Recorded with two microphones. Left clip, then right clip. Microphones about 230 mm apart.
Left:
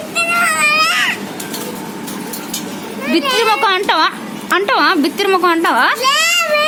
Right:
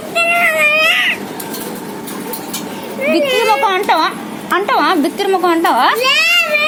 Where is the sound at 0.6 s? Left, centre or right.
Left.